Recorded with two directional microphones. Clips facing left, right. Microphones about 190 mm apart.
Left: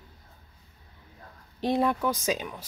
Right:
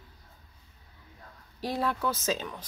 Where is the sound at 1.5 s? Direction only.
20° left (ahead or behind).